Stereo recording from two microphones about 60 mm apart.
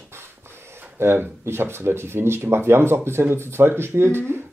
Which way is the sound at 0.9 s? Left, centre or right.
Right.